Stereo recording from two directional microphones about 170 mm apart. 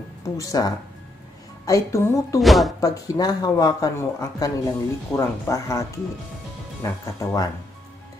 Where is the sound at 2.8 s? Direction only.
20° left (ahead or behind).